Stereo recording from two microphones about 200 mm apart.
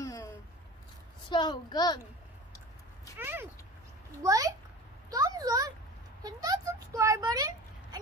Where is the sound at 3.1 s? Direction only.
10° right (ahead or behind).